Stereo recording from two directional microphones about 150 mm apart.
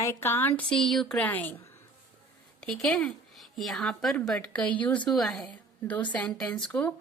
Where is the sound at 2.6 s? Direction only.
5° left (ahead or behind).